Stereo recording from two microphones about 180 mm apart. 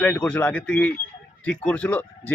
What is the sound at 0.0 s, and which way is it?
Speech, 10° left (ahead or behind).